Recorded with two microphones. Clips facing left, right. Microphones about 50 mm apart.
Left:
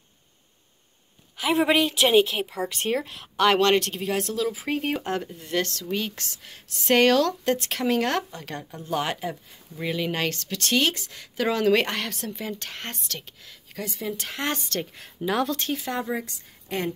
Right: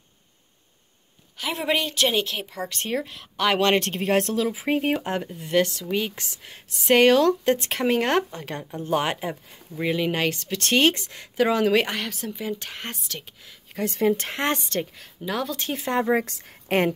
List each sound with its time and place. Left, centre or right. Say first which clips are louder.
1.4 s speech: left 4 dB; centre
3.5 s speech: right 2 dB; centre
3.8 s speech: right 5 dB; right
4.5 s speech: right 3 dB; right
14.0 s speech: right 7 dB; right
15.0 s speech: left 3 dB; centre
15.5 s speech: right 3 dB; right
16.3 s a woman's voice: right 7 dB; right